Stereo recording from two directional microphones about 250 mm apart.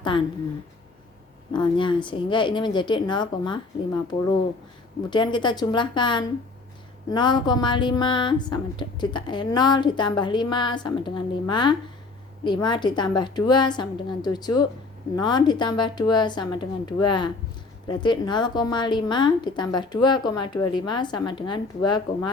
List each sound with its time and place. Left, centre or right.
1.5 s a woman's voice: centre
4.1 s a woman's voice: left
5.1 s speech: centre